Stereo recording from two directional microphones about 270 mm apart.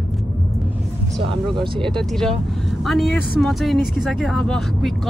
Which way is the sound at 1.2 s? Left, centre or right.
Centre.